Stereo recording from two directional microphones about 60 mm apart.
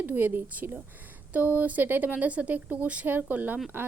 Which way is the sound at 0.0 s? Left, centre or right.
Right.